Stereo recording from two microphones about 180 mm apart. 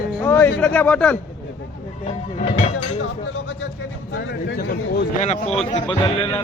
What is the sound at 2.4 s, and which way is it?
Speech, 35° left (ahead or behind).